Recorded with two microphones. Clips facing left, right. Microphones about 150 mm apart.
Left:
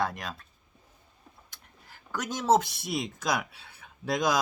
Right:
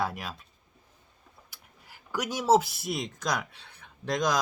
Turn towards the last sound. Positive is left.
turn(degrees=5)  # may be behind; listen again after turning